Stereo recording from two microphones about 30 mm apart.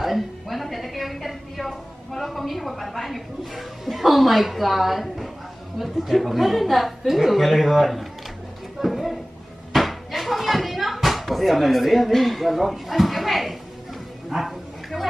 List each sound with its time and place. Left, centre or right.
0.0 s a woman's voice: centre
8.8 s a sound: centre
14.3 s bow-wow: centre